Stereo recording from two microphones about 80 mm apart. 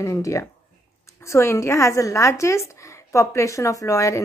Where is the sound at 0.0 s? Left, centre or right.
Left.